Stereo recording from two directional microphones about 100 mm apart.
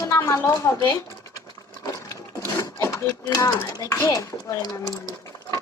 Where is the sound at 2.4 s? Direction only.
25° left (ahead or behind); by 5.1 s 45° left (ahead or behind).